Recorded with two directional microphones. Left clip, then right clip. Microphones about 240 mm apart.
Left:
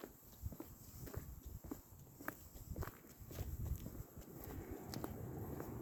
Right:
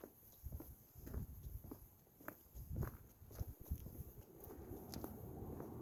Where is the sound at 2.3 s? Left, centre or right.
Centre.